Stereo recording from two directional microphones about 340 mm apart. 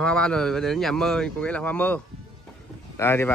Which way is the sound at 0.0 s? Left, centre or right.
Centre.